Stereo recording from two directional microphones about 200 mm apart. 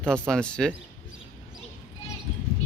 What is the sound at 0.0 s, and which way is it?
Speech, 5° left (ahead or behind).